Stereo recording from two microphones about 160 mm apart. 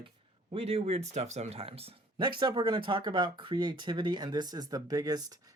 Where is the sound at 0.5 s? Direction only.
35° right (ahead or behind).